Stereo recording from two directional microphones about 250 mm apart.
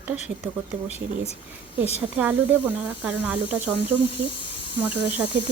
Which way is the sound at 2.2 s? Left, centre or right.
Centre.